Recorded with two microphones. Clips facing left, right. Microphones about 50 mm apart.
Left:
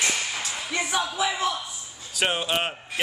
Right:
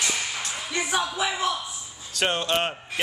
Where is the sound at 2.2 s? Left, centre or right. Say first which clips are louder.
Right 1 dB; centre.